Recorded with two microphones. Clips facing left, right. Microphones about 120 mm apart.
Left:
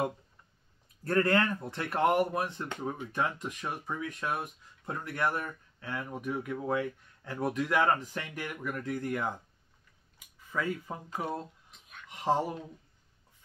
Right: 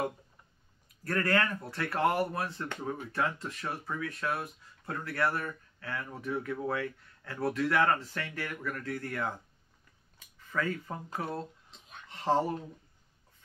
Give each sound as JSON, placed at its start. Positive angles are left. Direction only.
{"t": 1.0, "sound": "speech", "side_deg": 25}
{"t": 10.1, "sound": "a sound", "side_deg": 15}
{"t": 11.1, "sound": "speech", "side_deg": 15}